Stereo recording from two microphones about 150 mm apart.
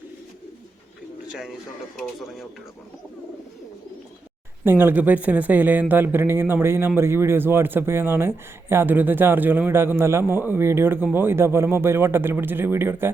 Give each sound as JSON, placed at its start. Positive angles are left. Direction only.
{"t": 4.6, "sound": "speech", "side_deg": -15}